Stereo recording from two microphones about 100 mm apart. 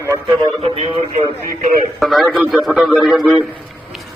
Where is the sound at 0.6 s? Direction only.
80° right.